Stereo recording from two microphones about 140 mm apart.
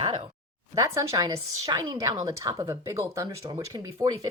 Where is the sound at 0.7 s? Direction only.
20° right (ahead or behind).